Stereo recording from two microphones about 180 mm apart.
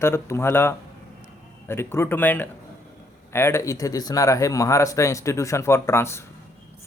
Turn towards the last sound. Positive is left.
turn(degrees=15)  # may be behind; listen again after turning